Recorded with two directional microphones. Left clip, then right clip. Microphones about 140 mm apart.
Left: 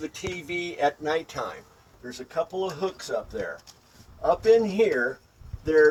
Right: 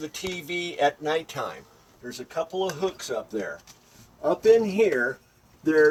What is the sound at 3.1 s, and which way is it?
Speech, 15° right (ahead or behind).